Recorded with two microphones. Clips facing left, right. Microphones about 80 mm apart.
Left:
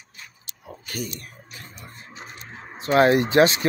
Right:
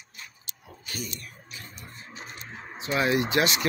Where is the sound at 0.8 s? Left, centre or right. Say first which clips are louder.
Left 5 dB; left.